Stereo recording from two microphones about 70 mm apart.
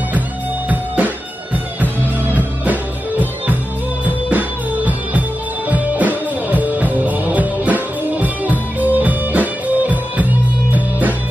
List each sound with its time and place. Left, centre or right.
0.7 s music: right